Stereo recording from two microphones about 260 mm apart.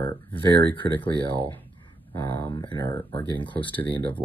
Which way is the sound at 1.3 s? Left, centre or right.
Centre.